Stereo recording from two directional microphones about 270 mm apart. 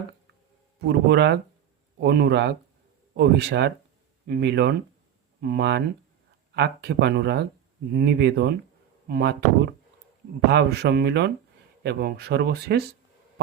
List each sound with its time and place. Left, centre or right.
0.9 s speech: right